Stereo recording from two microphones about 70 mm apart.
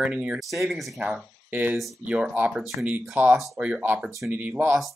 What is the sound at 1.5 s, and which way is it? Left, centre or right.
Speech, right.